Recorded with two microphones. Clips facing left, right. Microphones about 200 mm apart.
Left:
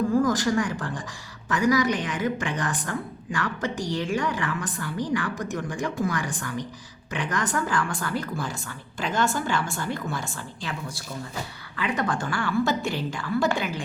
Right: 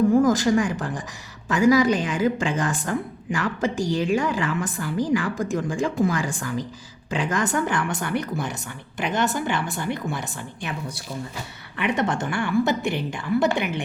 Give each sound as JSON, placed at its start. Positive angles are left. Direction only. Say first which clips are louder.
{"t": 0.1, "sound": "a woman's voice", "louder": "right 4 dB", "side_deg": -25}
{"t": 12.8, "sound": "a woman's voice", "louder": "right 3 dB", "side_deg": -60}
{"t": 13.1, "sound": "a woman's voice", "louder": "right 4 dB", "side_deg": -20}